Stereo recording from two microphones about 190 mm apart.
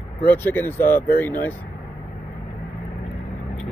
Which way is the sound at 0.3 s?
10° left (ahead or behind).